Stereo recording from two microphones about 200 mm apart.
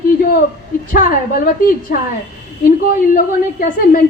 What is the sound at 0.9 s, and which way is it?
A woman's voice, 50° left (ahead or behind).